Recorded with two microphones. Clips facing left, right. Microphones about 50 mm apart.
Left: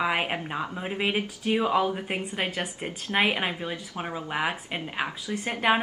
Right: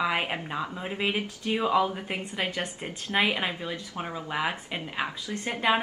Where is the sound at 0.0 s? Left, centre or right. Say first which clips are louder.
Left 1 dB; centre.